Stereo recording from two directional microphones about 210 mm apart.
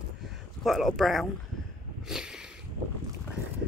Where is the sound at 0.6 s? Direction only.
Centre (ahead or behind).